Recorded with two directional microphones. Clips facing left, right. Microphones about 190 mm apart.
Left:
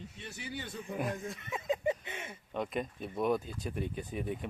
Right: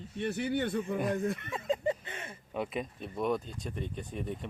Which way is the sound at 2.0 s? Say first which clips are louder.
Even; 20° left (ahead or behind).